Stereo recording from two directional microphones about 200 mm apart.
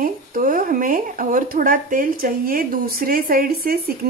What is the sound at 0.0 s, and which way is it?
Speech, 45° right (ahead or behind).